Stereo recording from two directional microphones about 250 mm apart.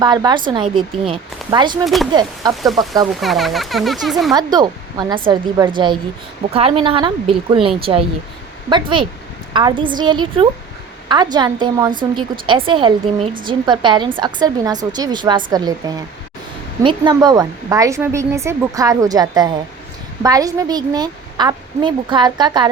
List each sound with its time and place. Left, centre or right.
0.0 s speech: centre
2.6 s speech: centre
4.5 s speech: centre
16.8 s speech: centre